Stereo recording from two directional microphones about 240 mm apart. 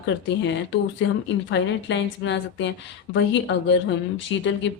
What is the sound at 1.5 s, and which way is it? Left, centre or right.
Speech, left.